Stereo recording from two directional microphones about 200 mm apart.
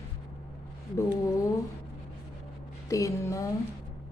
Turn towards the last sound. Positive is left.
turn(degrees=15)  # may be behind; listen again after turning